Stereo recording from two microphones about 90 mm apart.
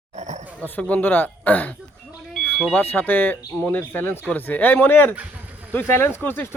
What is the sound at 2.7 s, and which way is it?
Speech, 20° left (ahead or behind).